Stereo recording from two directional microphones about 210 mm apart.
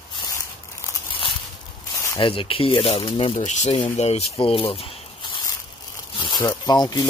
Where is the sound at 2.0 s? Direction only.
20° left (ahead or behind).